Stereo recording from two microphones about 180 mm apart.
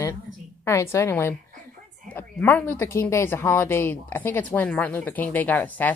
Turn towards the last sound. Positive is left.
turn(degrees=10)  # may be behind; listen again after turning